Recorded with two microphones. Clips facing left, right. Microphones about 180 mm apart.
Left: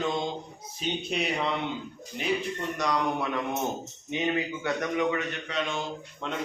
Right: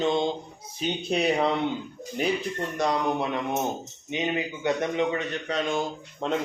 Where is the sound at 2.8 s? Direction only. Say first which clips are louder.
Right 3 dB; 25° right (ahead or behind).